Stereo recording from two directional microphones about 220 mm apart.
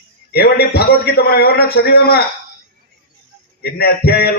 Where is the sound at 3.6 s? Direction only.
45° left (ahead or behind).